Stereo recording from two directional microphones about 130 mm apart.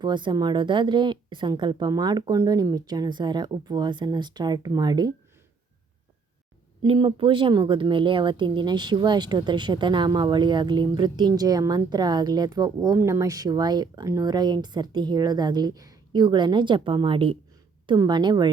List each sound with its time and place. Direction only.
0.0 s speech: 35° right (ahead or behind)
6.8 s speech: 45° right (ahead or behind)